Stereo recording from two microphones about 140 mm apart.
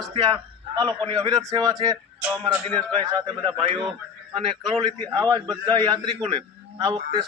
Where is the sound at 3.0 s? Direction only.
35° right (ahead or behind).